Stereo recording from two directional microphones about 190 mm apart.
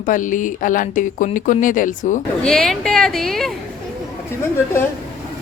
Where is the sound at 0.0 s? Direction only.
45° left (ahead or behind).